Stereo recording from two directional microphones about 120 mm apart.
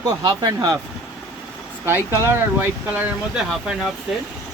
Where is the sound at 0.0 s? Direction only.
30° right (ahead or behind).